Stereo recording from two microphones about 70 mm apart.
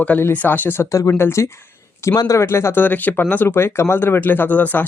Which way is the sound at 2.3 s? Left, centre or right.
Left.